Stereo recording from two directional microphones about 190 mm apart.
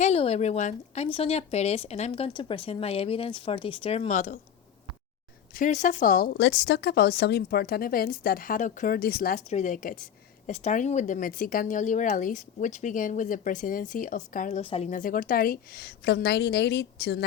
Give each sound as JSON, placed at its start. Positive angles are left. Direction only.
{"t": 0.0, "sound": "speech", "side_deg": 35}
{"t": 5.5, "sound": "speech", "side_deg": 40}
{"t": 9.5, "sound": "a woman's voice", "side_deg": 40}